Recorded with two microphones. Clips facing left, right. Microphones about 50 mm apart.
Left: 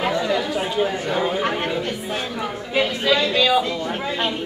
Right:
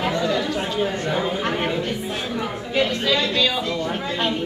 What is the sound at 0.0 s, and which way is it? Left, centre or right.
Chatter, centre.